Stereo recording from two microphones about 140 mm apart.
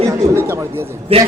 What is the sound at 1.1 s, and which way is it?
Speech, 45° right (ahead or behind).